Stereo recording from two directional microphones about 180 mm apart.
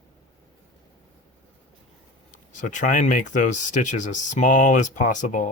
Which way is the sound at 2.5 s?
45° left (ahead or behind).